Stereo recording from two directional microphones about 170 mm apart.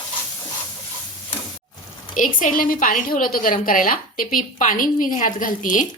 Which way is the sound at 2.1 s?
50° left (ahead or behind).